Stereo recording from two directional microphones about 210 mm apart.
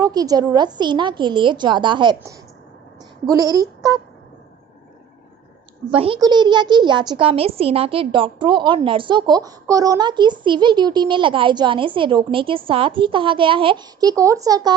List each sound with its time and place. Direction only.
0.0 s a child's voice: 20° right (ahead or behind)
5.9 s a child's voice: 25° right (ahead or behind)